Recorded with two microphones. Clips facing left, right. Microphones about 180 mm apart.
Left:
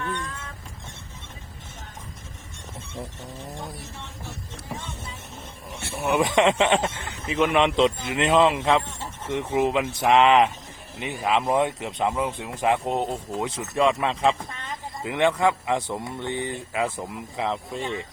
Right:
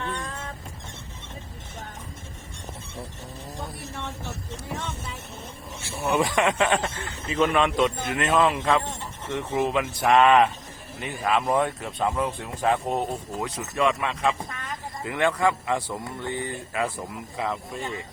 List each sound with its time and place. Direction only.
0.0 s vehicle: 30° right (ahead or behind)
6.0 s speech: 15° left (ahead or behind)